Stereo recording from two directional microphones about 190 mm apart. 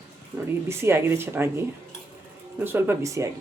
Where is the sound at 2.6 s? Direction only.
10° right (ahead or behind).